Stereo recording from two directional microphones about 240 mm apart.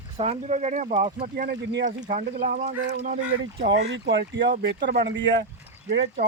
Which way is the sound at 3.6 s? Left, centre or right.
Right.